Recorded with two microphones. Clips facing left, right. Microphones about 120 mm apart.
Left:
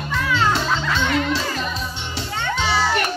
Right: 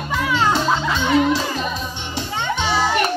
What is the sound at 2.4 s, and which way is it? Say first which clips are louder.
Children playing: right 1 dB; 15° right (ahead or behind).